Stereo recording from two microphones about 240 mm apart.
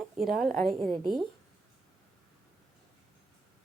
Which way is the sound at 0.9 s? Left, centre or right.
Centre.